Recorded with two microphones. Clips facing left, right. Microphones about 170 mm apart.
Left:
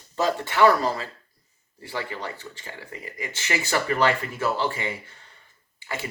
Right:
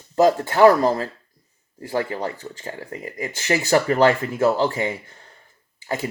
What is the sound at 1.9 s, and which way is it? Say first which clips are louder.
Speech: right 7 dB; 45° right (ahead or behind).